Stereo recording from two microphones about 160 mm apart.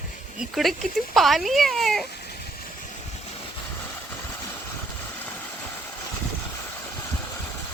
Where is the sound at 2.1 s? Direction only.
90° left.